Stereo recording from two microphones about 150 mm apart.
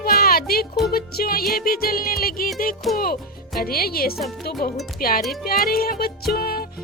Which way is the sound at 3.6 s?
90° left.